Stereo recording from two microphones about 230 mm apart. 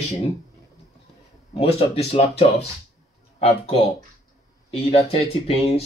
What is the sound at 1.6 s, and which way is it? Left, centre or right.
Speech, left.